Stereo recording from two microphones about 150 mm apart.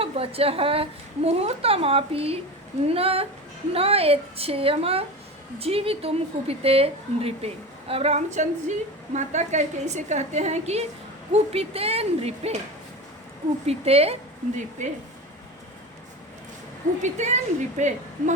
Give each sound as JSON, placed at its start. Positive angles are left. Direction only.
{"t": 0.0, "sound": "a woman's voice", "side_deg": -40}
{"t": 13.7, "sound": "a woman's voice", "side_deg": -40}
{"t": 17.0, "sound": "a woman's voice", "side_deg": -50}